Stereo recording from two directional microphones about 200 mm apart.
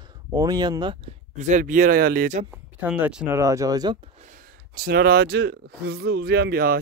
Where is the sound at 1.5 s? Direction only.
40° right (ahead or behind).